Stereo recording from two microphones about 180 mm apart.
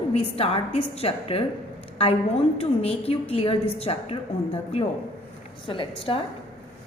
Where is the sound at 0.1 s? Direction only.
35° left (ahead or behind).